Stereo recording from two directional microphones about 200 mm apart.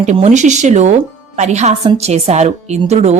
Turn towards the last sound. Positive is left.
turn(degrees=-30)  # may be behind; listen again after turning